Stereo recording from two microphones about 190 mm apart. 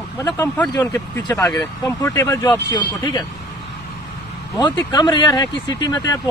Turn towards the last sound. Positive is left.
turn(degrees=20)  # may be behind; listen again after turning